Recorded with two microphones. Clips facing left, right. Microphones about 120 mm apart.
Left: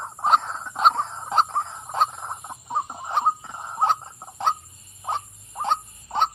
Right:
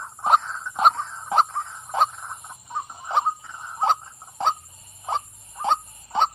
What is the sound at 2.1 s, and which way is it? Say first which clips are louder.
Chicken: left 4 dB; 35° left (ahead or behind).